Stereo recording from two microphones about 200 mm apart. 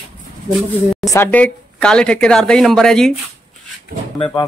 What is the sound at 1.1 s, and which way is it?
Speech, 10° left (ahead or behind).